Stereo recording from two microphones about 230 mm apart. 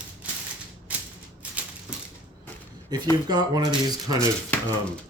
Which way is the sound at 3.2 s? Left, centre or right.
Centre.